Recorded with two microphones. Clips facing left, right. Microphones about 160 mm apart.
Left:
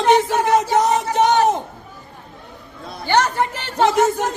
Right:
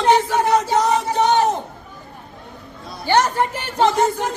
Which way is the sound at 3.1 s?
10° right (ahead or behind).